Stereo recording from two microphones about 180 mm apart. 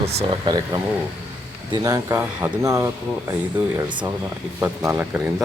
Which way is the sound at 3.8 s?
25° right (ahead or behind).